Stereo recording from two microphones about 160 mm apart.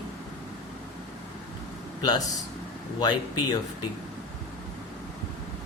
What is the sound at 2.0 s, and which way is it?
A man's voice, 25° left (ahead or behind).